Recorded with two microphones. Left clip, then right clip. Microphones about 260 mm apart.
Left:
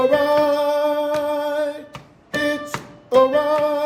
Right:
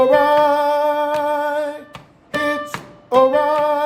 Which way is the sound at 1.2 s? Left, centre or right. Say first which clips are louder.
Right 2 dB; right.